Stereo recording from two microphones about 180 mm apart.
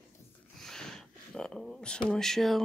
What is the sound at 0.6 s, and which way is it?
Speech, centre (ahead or behind).